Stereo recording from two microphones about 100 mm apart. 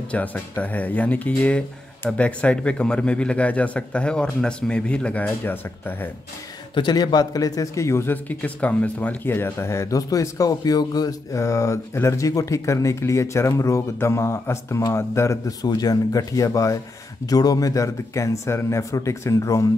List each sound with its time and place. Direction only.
0.1 s a man's voice: 15° left (ahead or behind)
6.7 s a man's voice: 50° left (ahead or behind); by 19.6 s 30° left (ahead or behind)